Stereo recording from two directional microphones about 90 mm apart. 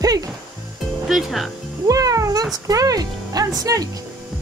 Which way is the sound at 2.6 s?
45° right (ahead or behind).